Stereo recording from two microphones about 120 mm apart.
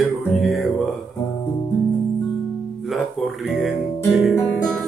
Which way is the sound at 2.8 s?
Centre (ahead or behind).